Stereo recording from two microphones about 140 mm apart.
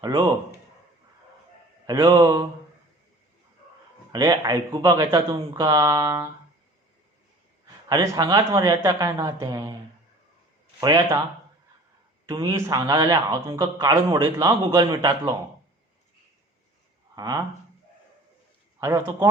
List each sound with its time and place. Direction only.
1.9 s a man's voice: 30° right (ahead or behind)
4.1 s a man's voice: 30° right (ahead or behind)
7.9 s a man's voice: 25° right (ahead or behind)
10.8 s speech: 30° right (ahead or behind)
12.3 s speech: 30° right (ahead or behind)
12.5 s a man's voice: 20° right (ahead or behind)
17.2 s a man's voice: 25° right (ahead or behind)
18.8 s a man's voice: 20° right (ahead or behind)